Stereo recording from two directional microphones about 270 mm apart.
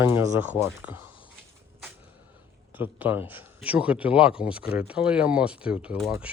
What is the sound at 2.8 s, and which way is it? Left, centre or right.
Speech, centre.